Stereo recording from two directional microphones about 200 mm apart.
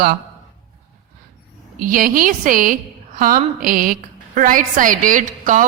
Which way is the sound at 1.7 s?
45° right (ahead or behind).